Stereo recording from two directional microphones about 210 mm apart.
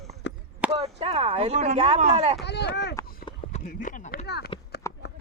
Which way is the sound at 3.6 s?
40° left (ahead or behind).